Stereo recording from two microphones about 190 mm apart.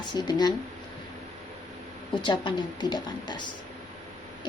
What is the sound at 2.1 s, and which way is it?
Speech, 25° left (ahead or behind).